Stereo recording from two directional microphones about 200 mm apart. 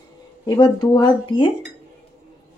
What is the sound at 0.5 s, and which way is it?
Speech, 20° left (ahead or behind).